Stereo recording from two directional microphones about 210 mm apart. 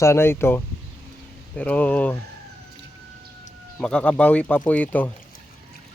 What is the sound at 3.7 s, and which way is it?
Speech, 5° left (ahead or behind).